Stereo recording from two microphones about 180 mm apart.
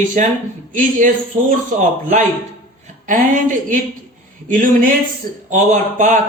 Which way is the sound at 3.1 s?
45° right (ahead or behind).